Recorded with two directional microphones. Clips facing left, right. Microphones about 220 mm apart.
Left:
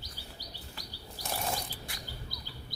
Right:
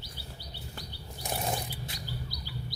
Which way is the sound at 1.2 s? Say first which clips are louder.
Right 2 dB; 20° right (ahead or behind).